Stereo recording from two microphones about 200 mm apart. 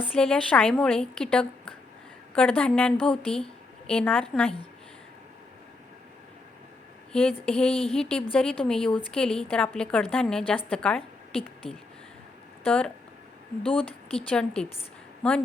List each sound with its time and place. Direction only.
0.1 s a woman's voice: 5° left (ahead or behind)
7.1 s a woman's voice: 5° left (ahead or behind)
7.7 s speech: 30° left (ahead or behind)
7.9 s a woman's voice: 5° left (ahead or behind)
12.6 s a woman's voice: 5° left (ahead or behind)
13.7 s speech: 30° left (ahead or behind)
14.3 s a woman's voice: 5° left (ahead or behind)